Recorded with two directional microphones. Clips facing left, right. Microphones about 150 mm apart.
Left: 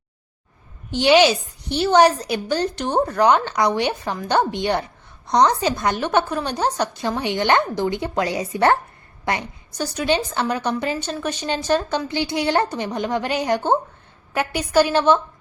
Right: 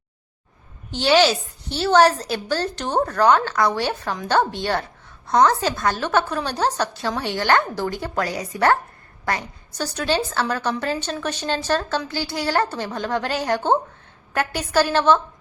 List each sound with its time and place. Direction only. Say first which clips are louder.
0.9 s a woman's voice: left 2 dB; 15° left (ahead or behind)